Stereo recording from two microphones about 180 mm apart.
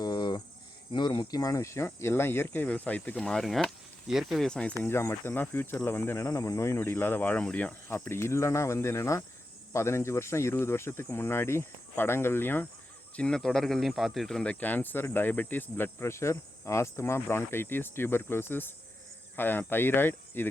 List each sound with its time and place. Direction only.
0.0 s cricket: 25° left (ahead or behind)
0.9 s speech: 25° left (ahead or behind)